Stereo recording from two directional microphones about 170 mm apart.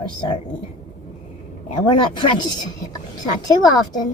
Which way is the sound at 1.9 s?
30° left (ahead or behind).